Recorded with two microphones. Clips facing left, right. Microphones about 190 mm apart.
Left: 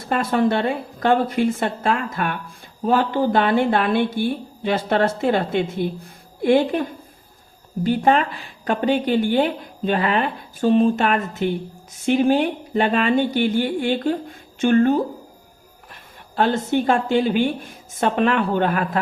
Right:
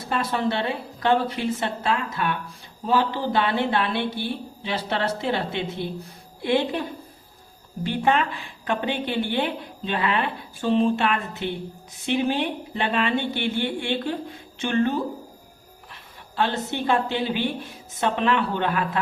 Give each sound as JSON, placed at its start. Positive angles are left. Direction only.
{"t": 0.1, "sound": "a woman's voice", "side_deg": 50}
{"t": 7.9, "sound": "a woman's voice", "side_deg": 40}